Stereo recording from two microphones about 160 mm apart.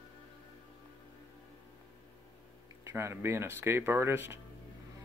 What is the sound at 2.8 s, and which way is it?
Speech, 15° right (ahead or behind).